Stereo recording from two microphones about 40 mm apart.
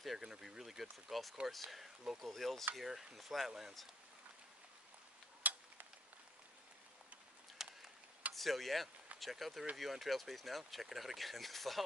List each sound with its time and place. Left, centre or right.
0.2 s speech: centre
2.7 s speech: centre
5.4 s tick-tock: right
7.6 s a sound: centre
8.4 s speech: centre